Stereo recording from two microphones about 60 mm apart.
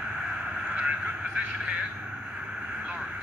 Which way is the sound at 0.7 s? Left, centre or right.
Right.